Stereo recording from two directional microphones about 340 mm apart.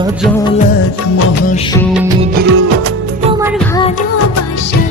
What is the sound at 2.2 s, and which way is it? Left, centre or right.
Music of bollywood, right.